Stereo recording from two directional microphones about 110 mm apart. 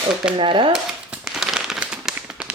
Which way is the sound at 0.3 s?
50° right (ahead or behind).